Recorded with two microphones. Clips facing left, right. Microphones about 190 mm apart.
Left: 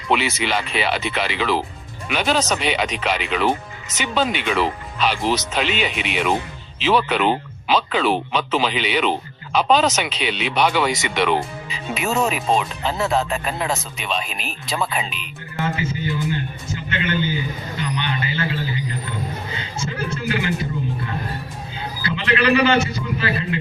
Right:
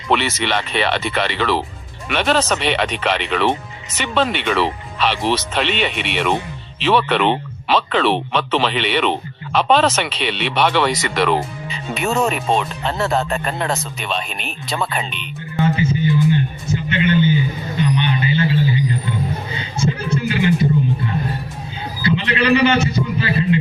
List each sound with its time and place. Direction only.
0.1 s speech: centre (ahead or behind)
15.5 s speech: 20° right (ahead or behind)
17.7 s a sound: 20° right (ahead or behind)
19.5 s music: 15° right (ahead or behind)
22.0 s a man's voice: 20° right (ahead or behind)